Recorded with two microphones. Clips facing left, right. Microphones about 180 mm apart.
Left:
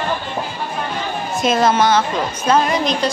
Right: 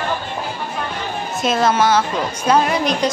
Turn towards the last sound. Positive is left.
turn(degrees=-10)  # may be behind; listen again after turning